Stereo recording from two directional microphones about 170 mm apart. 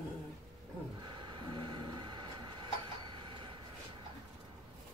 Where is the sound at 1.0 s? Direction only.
25° right (ahead or behind).